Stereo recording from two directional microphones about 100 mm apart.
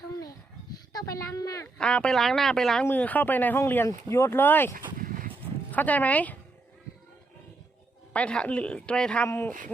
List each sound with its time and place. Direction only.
0.9 s a sound: 35° left (ahead or behind)
1.8 s speech: 10° left (ahead or behind)
2.8 s speech: 15° left (ahead or behind)
5.7 s speech: 15° left (ahead or behind)
8.1 s speech: 10° left (ahead or behind)
9.2 s speech: 20° left (ahead or behind)